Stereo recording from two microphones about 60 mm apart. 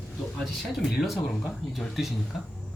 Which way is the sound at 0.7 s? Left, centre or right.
Centre.